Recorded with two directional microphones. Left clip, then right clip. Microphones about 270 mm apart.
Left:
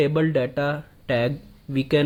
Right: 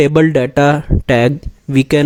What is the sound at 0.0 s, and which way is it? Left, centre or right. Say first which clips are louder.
Speech: right 10 dB; right.